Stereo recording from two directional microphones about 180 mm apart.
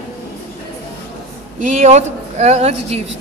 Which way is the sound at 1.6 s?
40° right (ahead or behind).